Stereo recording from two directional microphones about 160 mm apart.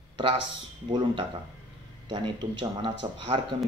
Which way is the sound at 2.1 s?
30° right (ahead or behind).